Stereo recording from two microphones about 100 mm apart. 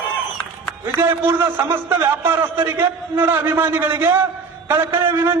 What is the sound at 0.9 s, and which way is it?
A man's voice, 25° right (ahead or behind).